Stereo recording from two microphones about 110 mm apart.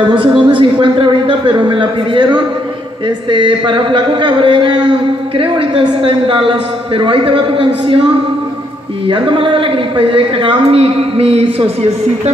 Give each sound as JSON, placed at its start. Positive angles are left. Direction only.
{"t": 0.4, "sound": "speech", "side_deg": -50}